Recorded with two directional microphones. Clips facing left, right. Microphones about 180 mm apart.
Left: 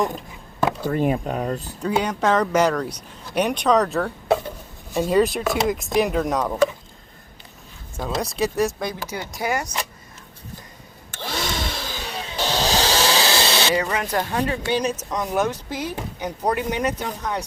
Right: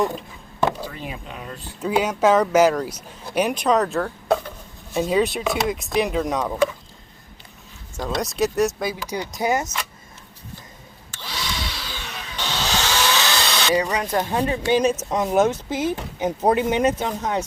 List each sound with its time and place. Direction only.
0.0 s a sound: centre (ahead or behind)
0.8 s speech: 50° left (ahead or behind)
1.8 s speech: 5° right (ahead or behind)
7.9 s speech: 5° left (ahead or behind)
9.0 s speech: 20° right (ahead or behind)
11.1 s a sound: 50° left (ahead or behind); by 13.7 s 30° left (ahead or behind)
14.2 s speech: 20° right (ahead or behind)